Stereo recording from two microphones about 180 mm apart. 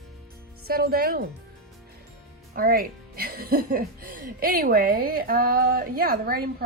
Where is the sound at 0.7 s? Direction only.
55° right (ahead or behind).